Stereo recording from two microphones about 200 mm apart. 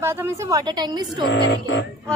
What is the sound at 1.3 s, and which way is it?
Music, 60° left (ahead or behind).